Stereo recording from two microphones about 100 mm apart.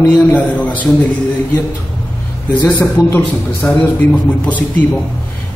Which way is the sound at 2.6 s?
20° left (ahead or behind).